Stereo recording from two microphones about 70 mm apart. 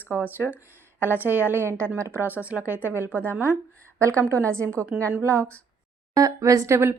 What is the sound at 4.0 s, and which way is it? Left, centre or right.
A woman's voice, right.